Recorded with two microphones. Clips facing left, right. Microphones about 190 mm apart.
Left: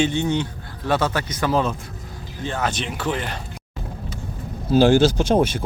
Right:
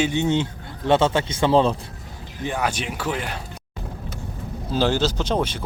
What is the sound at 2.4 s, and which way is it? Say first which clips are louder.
Speech: even; 10° right (ahead or behind).